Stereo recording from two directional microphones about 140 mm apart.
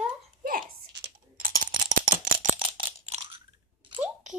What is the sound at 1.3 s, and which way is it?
Typing, 80° right.